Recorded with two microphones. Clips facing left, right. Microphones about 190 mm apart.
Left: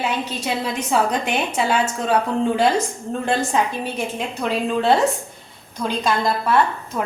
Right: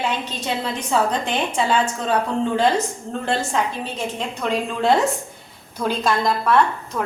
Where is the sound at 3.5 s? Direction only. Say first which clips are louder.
Left 2 dB; 15° left (ahead or behind).